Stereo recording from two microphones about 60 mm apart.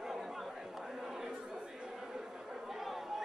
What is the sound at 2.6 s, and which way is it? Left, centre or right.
Chatter, centre.